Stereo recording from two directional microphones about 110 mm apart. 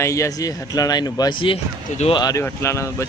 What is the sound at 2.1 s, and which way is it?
Speech, 40° left (ahead or behind).